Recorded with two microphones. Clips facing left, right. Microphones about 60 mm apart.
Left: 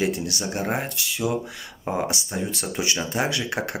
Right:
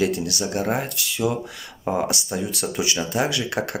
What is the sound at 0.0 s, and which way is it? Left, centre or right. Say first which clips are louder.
Speech: right 2 dB; left.